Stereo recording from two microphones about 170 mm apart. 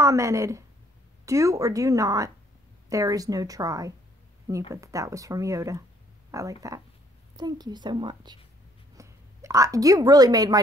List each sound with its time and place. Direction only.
0.0 s a woman's voice: 15° right (ahead or behind)